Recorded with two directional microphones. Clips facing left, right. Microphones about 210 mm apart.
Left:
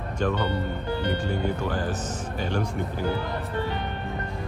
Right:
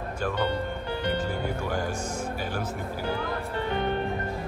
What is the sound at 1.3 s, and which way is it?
Speech, 10° right (ahead or behind).